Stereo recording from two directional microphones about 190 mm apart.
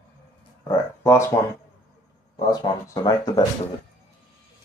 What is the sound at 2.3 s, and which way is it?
Speech, 20° left (ahead or behind).